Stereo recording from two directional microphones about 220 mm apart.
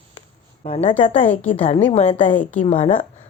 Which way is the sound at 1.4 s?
5° left (ahead or behind).